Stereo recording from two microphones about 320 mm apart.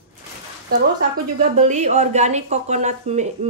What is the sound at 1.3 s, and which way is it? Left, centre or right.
A woman's voice, right.